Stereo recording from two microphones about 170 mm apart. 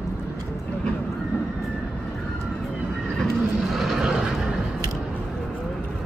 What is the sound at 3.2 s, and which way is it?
Neigh, centre (ahead or behind).